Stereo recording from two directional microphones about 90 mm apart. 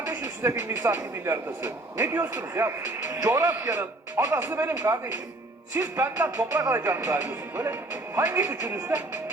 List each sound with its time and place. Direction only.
0.0 s speech: 25° right (ahead or behind)
4.8 s speech: 35° right (ahead or behind)